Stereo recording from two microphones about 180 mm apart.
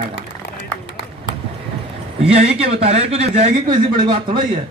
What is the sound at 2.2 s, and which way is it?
Speech, 35° right (ahead or behind).